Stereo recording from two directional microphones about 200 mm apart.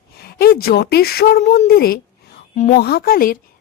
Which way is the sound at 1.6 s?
50° left (ahead or behind).